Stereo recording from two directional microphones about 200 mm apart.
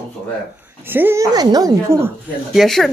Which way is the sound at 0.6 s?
10° right (ahead or behind).